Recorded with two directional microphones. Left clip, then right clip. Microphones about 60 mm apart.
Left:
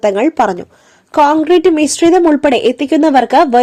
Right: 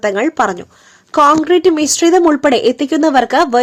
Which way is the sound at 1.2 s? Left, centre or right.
Centre.